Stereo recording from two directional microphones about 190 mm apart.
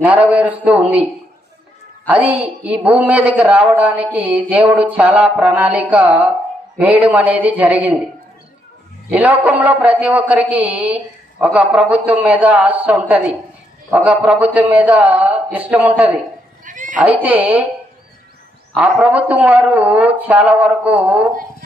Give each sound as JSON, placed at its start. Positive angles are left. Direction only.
{"t": 0.0, "sound": "a man's voice", "side_deg": -10}
{"t": 2.0, "sound": "a man's voice", "side_deg": -10}
{"t": 9.1, "sound": "a man's voice", "side_deg": -10}
{"t": 16.6, "sound": "a sound", "side_deg": -45}
{"t": 17.2, "sound": "a man's voice", "side_deg": -10}
{"t": 18.8, "sound": "a man's voice", "side_deg": -5}